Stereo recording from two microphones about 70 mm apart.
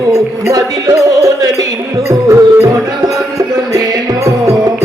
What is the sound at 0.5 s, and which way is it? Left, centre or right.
Music, right.